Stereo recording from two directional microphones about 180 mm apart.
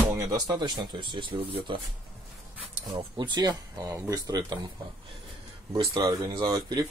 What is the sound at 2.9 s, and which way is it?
Speech, 25° right (ahead or behind).